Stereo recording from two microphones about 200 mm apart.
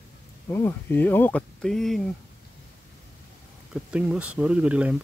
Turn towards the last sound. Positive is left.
turn(degrees=-5)  # may be behind; listen again after turning